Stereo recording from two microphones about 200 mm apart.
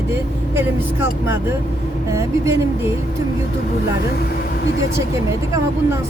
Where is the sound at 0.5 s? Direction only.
10° right (ahead or behind).